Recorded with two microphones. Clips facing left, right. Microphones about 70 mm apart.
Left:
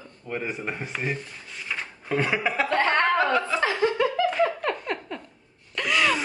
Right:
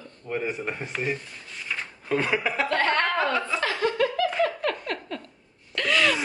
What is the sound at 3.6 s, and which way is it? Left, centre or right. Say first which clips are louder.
Laughter: left 2 dB; centre.